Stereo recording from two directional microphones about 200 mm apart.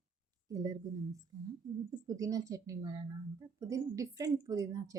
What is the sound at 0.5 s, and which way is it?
Speech, 20° right (ahead or behind).